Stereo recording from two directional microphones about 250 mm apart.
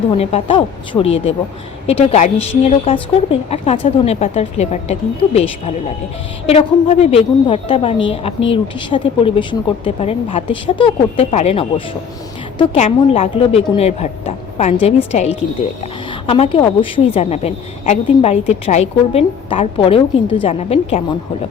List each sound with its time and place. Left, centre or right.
0.2 s a woman's voice: left